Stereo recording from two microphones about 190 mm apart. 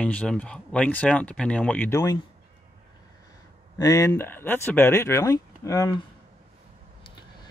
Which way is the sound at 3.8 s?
15° left (ahead or behind).